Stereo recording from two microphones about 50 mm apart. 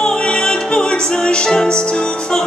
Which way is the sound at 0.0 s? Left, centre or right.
Centre.